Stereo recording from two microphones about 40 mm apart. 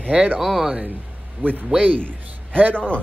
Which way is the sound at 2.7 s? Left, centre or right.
Left.